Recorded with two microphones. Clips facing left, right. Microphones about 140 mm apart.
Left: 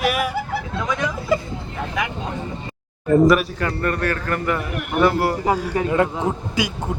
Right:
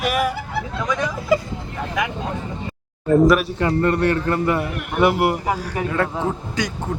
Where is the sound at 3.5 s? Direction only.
25° right (ahead or behind).